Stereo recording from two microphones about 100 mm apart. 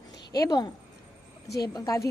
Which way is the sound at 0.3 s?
40° left (ahead or behind).